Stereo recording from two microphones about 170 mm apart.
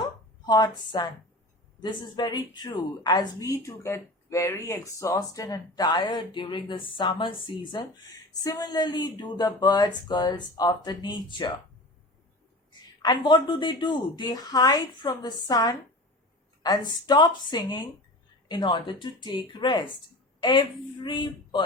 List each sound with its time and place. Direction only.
0.4 s a woman's voice: 25° left (ahead or behind)
13.0 s a woman's voice: 25° left (ahead or behind)